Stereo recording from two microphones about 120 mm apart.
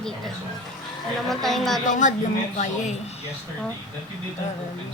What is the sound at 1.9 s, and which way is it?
Speech, 90° left.